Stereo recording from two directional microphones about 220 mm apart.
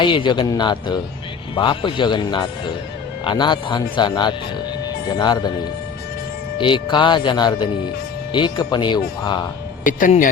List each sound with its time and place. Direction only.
0.0 s speech: 20° left (ahead or behind)
6.6 s speech: 20° left (ahead or behind)
9.8 s speech: 35° left (ahead or behind)